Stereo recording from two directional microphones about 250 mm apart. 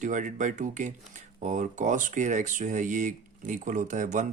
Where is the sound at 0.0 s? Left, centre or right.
Right.